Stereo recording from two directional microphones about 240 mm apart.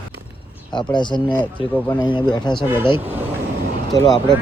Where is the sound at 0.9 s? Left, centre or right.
Centre.